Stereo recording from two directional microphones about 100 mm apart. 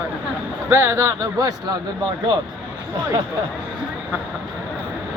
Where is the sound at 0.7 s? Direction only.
25° right (ahead or behind).